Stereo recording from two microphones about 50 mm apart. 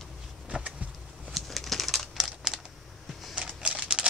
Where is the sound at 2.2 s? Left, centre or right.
Centre.